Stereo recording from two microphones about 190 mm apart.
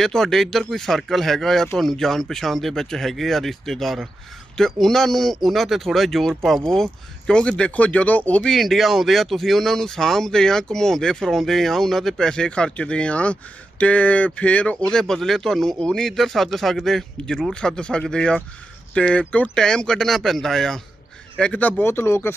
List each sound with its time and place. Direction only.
0.0 s speech: centre (ahead or behind)